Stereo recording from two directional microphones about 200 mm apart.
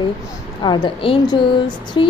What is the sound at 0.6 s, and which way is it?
A woman's voice, 25° left (ahead or behind).